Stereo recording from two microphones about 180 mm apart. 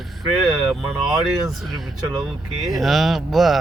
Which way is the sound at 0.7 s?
Centre (ahead or behind).